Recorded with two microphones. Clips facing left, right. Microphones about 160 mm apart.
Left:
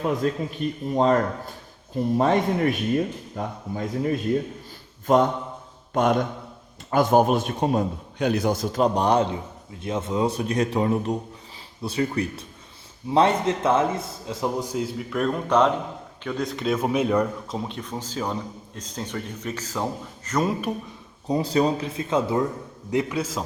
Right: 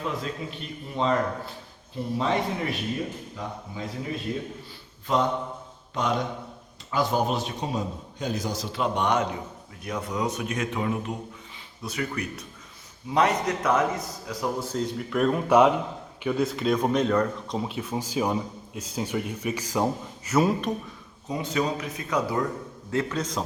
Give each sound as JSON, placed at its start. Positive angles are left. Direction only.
{"t": 0.2, "sound": "a man's voice", "side_deg": 50}
{"t": 14.7, "sound": "speech", "side_deg": 5}
{"t": 17.6, "sound": "speech", "side_deg": -5}
{"t": 21.2, "sound": "a man's voice", "side_deg": 35}
{"t": 22.9, "sound": "a man's voice", "side_deg": 15}